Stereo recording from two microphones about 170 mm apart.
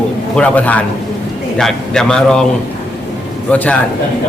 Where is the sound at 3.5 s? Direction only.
10° left (ahead or behind).